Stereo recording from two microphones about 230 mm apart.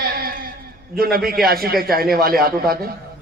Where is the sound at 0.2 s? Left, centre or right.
Right.